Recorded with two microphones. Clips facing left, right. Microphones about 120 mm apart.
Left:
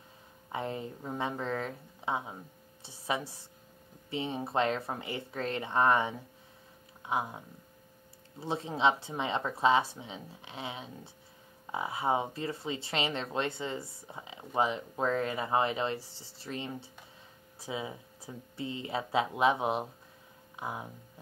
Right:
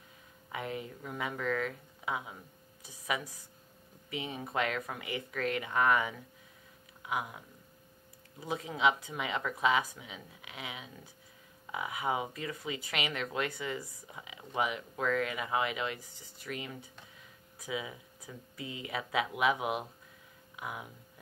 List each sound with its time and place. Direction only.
0.5 s speech: 30° left (ahead or behind)